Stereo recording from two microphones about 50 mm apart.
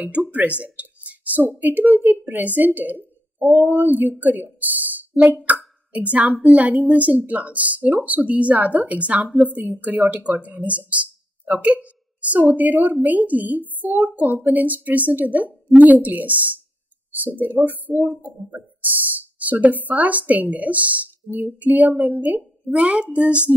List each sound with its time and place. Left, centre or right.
0.0 s a woman's voice: right
11.4 s a sound: right
12.5 s speech: right
18.5 s speech: right